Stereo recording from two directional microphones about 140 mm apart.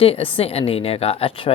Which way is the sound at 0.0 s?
40° left (ahead or behind).